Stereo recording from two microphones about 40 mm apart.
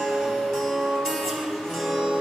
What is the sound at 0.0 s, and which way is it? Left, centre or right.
Music, centre.